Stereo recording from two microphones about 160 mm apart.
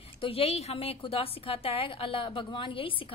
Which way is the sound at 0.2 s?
35° left (ahead or behind).